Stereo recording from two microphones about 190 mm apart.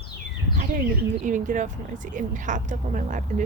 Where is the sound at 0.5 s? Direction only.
45° right (ahead or behind).